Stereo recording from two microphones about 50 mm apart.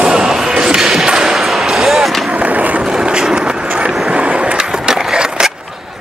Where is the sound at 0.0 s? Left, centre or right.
Centre.